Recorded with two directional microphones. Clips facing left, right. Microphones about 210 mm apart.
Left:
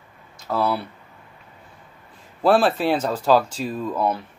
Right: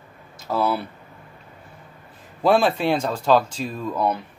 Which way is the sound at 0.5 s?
5° right (ahead or behind).